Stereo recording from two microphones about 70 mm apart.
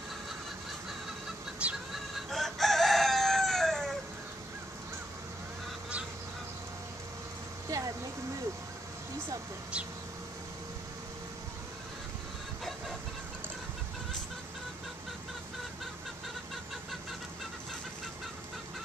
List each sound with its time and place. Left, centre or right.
1.6 s chicken: centre
2.1 s chicken: centre
7.7 s a sound: right